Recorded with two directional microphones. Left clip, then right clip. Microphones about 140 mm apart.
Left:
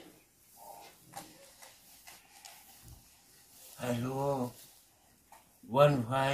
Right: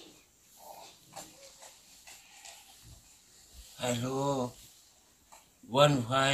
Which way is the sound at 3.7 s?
15° right (ahead or behind).